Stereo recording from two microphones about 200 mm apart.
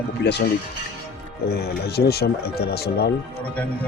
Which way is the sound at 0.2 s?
55° left (ahead or behind).